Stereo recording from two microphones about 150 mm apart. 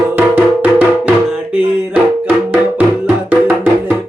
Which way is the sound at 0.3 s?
10° right (ahead or behind).